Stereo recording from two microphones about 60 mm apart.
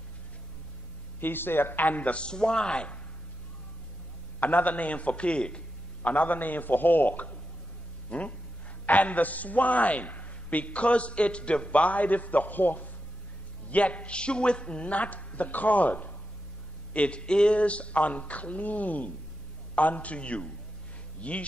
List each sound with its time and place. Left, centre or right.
1.2 s a man's voice: left; by 3.0 s centre
4.4 s a man's voice: left